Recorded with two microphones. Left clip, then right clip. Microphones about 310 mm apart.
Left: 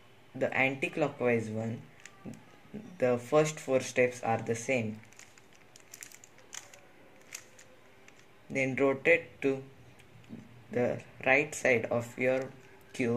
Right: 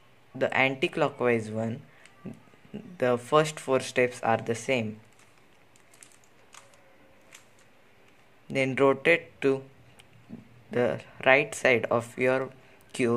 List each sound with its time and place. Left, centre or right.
0.4 s speech: right
3.0 s speech: right
8.5 s speech: right
10.7 s speech: right